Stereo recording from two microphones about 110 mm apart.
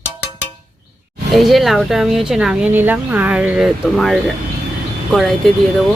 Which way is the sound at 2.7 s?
20° right (ahead or behind).